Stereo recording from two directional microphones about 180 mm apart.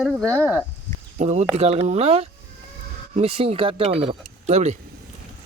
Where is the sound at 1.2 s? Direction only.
40° right (ahead or behind).